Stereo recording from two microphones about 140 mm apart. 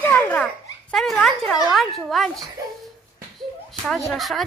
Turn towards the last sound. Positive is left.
turn(degrees=0)  # may be behind; listen again after turning